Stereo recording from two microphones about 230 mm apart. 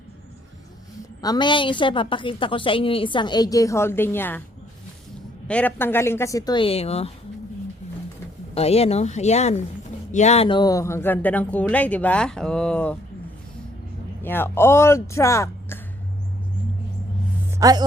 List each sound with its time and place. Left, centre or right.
1.2 s a woman's voice: centre
5.5 s speech: centre; by 7.1 s left
8.5 s a woman's voice: left; by 13.0 s centre
14.2 s speech: centre
17.6 s speech: centre